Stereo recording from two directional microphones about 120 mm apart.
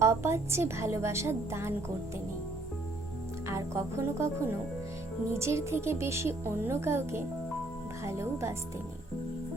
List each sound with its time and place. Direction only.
0.0 s speech: 25° right (ahead or behind)
3.5 s speech: 25° right (ahead or behind)